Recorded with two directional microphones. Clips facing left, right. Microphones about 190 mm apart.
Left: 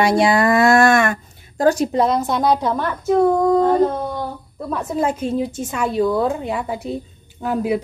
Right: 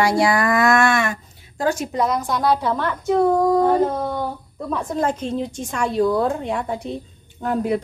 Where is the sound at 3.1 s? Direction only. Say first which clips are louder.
Left 2 dB; centre (ahead or behind).